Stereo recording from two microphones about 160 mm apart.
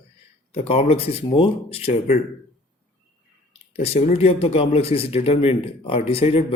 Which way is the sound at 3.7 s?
40° left (ahead or behind).